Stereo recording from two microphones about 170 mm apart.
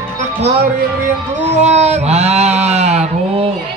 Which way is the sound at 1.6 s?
40° right (ahead or behind).